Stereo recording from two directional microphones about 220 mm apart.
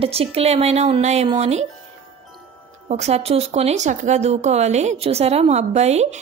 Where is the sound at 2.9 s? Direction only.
30° right (ahead or behind).